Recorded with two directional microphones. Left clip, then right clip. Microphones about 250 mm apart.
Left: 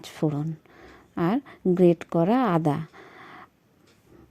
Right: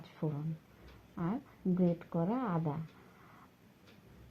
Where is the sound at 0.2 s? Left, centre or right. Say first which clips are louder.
Left 13 dB; left.